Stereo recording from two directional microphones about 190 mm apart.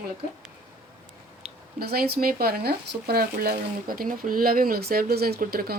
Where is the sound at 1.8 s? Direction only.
55° right (ahead or behind).